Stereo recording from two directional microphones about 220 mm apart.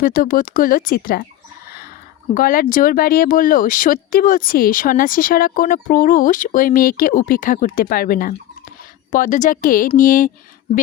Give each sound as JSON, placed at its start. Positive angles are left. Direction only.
{"t": 0.0, "sound": "speech", "side_deg": 40}
{"t": 2.3, "sound": "speech", "side_deg": 40}